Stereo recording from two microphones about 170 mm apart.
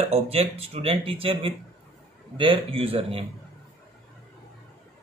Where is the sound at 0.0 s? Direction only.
35° right (ahead or behind).